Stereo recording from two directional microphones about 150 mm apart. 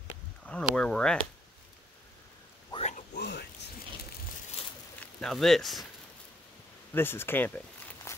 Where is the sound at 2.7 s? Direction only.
45° left (ahead or behind).